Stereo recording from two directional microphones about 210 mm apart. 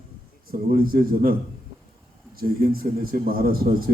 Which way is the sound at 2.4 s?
45° right (ahead or behind).